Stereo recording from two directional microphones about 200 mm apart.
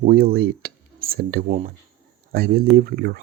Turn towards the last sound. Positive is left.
turn(degrees=-50)  # may be behind; listen again after turning